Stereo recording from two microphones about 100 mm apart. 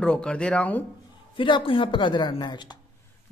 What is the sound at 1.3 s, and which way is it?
Speech, 55° left (ahead or behind).